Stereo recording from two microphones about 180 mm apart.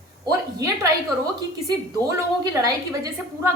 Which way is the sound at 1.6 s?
20° right (ahead or behind).